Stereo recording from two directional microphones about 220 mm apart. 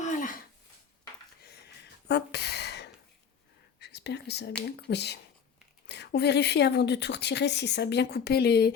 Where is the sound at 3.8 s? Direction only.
50° left (ahead or behind).